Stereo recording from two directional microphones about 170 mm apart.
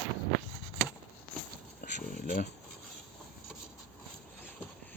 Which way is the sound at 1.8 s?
50° left (ahead or behind).